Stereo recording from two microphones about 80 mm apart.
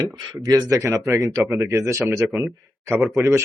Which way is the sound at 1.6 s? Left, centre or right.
Right.